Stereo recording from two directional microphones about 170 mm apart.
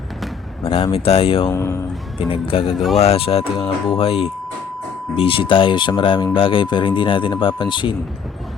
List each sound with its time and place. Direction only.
0.6 s speech: 30° left (ahead or behind)
1.5 s speech: 15° left (ahead or behind)
2.1 s speech: 35° left (ahead or behind)
2.7 s speech: centre (ahead or behind)
3.0 s speech: 35° left (ahead or behind)